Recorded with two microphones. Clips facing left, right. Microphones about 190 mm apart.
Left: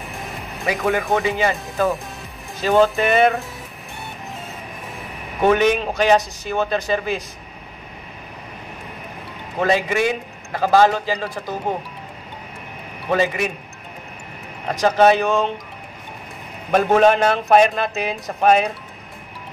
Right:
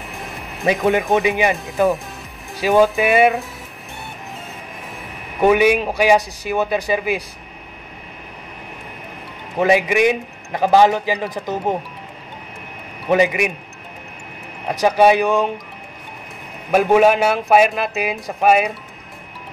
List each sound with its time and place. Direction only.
0.7 s a man's voice: 20° right (ahead or behind)
5.4 s a man's voice: 10° right (ahead or behind)
9.6 s a man's voice: 15° right (ahead or behind)
13.1 s a man's voice: 15° right (ahead or behind)
14.7 s a man's voice: 10° right (ahead or behind)
16.7 s a man's voice: 10° right (ahead or behind)